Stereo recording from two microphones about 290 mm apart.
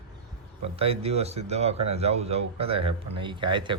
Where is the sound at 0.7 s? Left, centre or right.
Centre.